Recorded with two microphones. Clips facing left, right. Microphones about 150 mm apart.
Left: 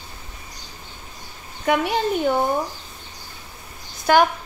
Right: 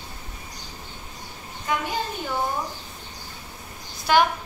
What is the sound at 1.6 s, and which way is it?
Speech, 70° left (ahead or behind).